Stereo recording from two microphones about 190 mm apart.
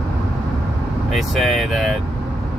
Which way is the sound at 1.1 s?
Centre (ahead or behind).